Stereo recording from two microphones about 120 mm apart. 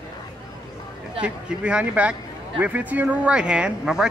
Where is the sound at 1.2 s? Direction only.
10° right (ahead or behind).